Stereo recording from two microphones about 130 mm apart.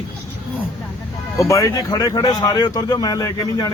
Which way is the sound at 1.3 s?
25° left (ahead or behind).